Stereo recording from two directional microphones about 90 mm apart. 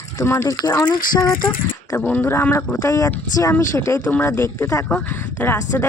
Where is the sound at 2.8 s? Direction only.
40° left (ahead or behind).